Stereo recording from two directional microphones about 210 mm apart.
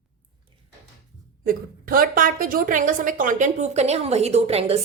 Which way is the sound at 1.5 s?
45° right (ahead or behind).